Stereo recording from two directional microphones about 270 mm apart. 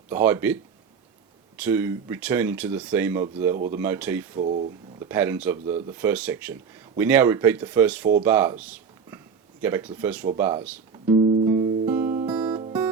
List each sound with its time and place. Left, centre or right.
0.1 s speech: centre
1.5 s speech: centre
4.4 s speech: right
4.9 s speech: centre
11.0 s music: centre